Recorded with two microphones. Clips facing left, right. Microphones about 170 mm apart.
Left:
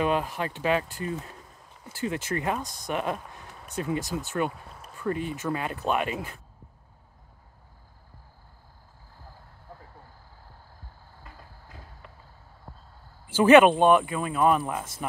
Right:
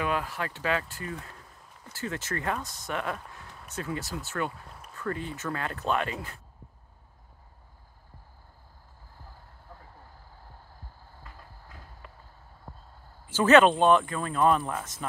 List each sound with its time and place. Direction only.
0.0 s speech: 20° left (ahead or behind)
13.3 s speech: 10° left (ahead or behind)